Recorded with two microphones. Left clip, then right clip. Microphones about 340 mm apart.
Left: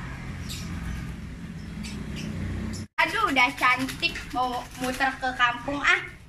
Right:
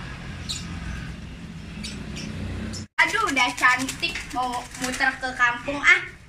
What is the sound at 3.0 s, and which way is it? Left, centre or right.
A woman's voice, centre.